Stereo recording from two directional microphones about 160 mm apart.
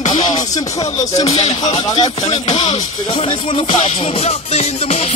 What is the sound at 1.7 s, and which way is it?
Music, 25° left (ahead or behind).